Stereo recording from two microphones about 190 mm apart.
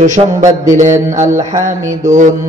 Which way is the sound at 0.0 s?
40° right (ahead or behind).